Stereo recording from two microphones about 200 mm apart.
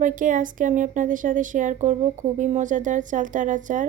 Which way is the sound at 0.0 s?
40° right (ahead or behind).